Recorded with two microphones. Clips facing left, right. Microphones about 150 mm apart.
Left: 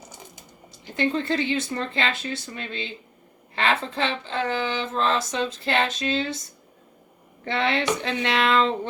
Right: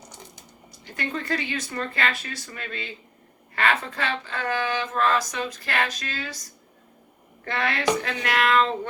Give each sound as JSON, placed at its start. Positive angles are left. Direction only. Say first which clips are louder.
{"t": 0.7, "sound": "speech", "louder": "left 7 dB", "side_deg": 25}
{"t": 7.4, "sound": "speech", "louder": "left 1 dB", "side_deg": 25}